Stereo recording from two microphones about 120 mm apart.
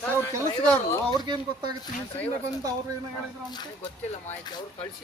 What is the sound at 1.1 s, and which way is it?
Speech, 35° right (ahead or behind).